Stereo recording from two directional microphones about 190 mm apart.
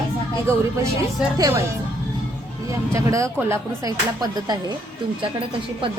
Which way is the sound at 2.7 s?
15° right (ahead or behind).